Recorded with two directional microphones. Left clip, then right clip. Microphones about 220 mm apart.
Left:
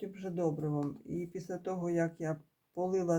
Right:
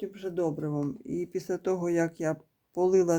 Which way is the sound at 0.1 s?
40° right (ahead or behind).